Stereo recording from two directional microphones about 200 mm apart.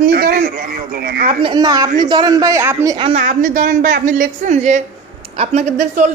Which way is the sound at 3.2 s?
45° right (ahead or behind).